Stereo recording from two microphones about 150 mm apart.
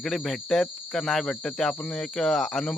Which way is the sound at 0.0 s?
5° left (ahead or behind).